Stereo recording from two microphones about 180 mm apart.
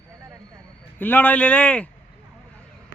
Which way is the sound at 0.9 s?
10° left (ahead or behind).